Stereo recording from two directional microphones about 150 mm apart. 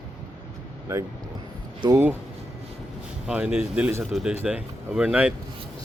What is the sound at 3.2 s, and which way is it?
Speech, 5° right (ahead or behind).